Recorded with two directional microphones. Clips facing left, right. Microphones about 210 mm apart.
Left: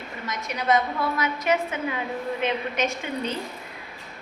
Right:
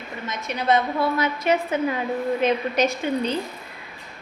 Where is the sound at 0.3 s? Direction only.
25° right (ahead or behind).